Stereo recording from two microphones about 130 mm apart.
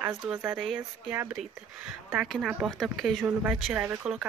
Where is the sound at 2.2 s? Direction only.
Centre (ahead or behind).